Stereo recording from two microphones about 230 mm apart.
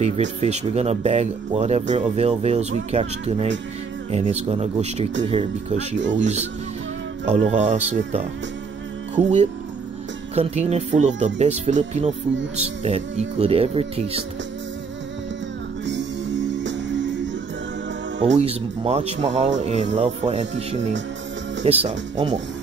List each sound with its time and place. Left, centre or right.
0.0 s speech: right
5.9 s speech: right
7.2 s speech: right
15.8 s music: right
18.3 s speech: right